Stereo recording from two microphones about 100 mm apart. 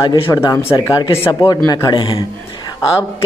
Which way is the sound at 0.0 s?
40° left (ahead or behind).